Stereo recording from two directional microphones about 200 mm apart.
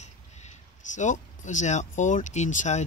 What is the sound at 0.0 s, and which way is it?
Speech, 35° left (ahead or behind).